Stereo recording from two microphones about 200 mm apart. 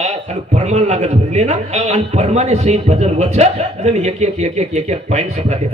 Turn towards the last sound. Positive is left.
turn(degrees=-35)  # may be behind; listen again after turning